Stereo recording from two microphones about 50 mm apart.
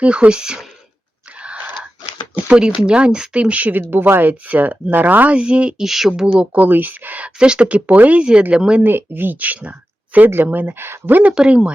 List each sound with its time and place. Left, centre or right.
0.0 s speech: right
1.4 s wheeze: right
2.3 s speech: right
5.4 s speech: centre
5.8 s speech: centre
6.3 s speech: right
6.7 s speech: right
7.3 s speech: centre
8.8 s speech: right
10.2 s speech: right
11.1 s speech: right